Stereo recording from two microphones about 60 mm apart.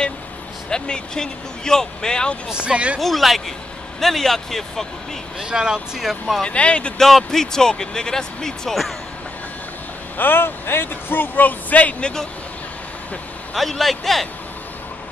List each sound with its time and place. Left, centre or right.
0.7 s speech: centre
2.5 s speech: centre
3.0 s speech: centre
5.4 s speech: centre
5.9 s speech: centre
6.4 s speech: centre
7.0 s speech: centre
10.1 s speech: left
13.6 s speech: centre